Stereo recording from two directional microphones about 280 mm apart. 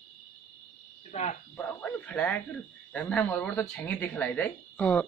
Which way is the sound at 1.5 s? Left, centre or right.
Centre.